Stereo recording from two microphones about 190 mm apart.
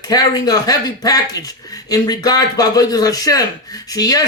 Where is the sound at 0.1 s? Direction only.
20° left (ahead or behind).